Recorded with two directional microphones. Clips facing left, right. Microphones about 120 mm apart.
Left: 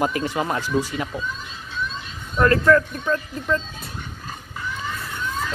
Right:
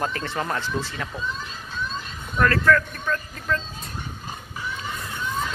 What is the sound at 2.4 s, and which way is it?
Speech, 25° left (ahead or behind).